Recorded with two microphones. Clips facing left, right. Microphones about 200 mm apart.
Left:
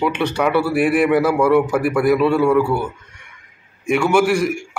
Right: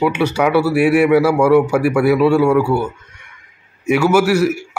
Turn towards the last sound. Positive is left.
turn(degrees=-5)  # may be behind; listen again after turning